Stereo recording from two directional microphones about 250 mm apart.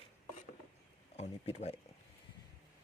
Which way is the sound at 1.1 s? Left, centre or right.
Left.